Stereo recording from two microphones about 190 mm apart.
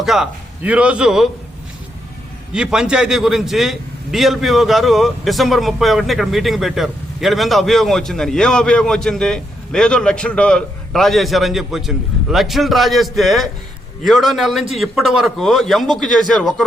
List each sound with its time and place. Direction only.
0.0 s a man's voice: centre (ahead or behind)
2.5 s a man's voice: 5° right (ahead or behind)